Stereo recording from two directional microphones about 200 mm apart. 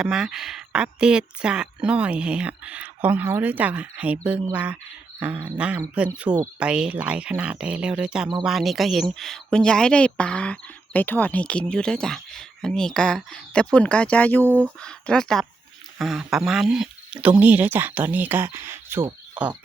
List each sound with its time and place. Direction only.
0.0 s speech: 5° right (ahead or behind)
6.3 s speech: 20° right (ahead or behind)
6.6 s speech: 5° right (ahead or behind)